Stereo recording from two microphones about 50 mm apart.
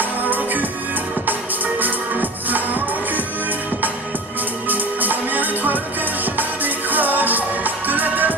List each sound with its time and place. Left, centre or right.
0.0 s music: right
1.8 s music: right
4.6 s music: right